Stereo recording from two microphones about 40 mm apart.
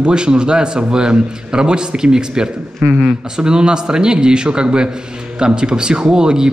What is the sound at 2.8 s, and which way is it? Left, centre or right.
Speech, right.